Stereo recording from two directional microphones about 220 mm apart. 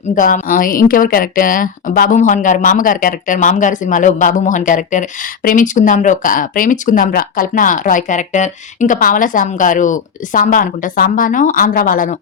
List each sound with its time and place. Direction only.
0.2 s a woman's voice: 40° left (ahead or behind)